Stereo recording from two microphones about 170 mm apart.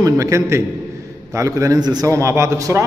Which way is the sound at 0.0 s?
20° right (ahead or behind).